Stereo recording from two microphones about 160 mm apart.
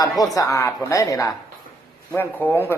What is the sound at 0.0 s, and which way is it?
A woman's voice, 20° left (ahead or behind).